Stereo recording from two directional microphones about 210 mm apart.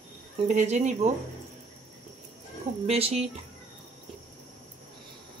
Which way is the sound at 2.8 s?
30° right (ahead or behind).